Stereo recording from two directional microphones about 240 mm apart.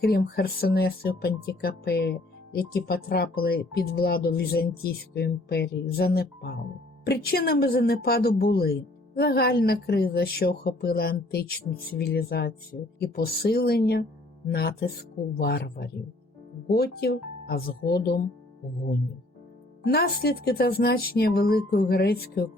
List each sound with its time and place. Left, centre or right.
0.0 s speech: left
19.8 s speech: left